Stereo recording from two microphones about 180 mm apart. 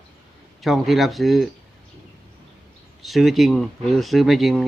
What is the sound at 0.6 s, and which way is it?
Speech, centre (ahead or behind).